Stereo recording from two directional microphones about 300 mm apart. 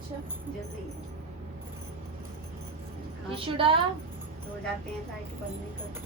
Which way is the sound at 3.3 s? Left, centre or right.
Centre.